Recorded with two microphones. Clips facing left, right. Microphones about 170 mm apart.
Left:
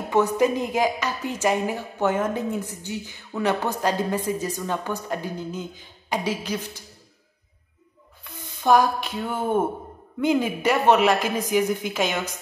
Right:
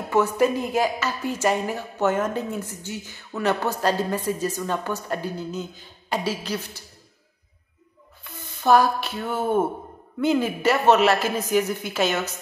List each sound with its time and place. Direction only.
0.1 s a woman's voice: 15° left (ahead or behind)
8.2 s a sound: 15° left (ahead or behind)
10.2 s a woman's voice: 15° left (ahead or behind)